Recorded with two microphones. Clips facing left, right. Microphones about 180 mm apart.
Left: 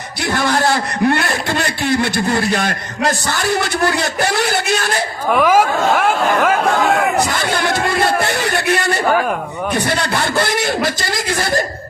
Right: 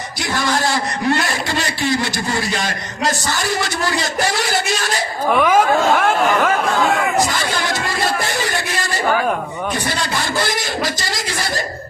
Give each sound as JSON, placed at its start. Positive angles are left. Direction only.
{"t": 0.2, "sound": "a man's voice", "side_deg": 60}
{"t": 5.3, "sound": "speech", "side_deg": 5}
{"t": 7.0, "sound": "a man's voice", "side_deg": 60}